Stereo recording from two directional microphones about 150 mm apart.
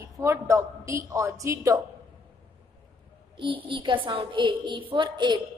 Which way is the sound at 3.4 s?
35° right (ahead or behind).